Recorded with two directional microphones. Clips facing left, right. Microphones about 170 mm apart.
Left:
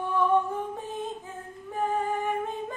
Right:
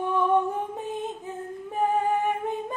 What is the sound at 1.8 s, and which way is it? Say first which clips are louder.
Music: right 4 dB; 15° right (ahead or behind).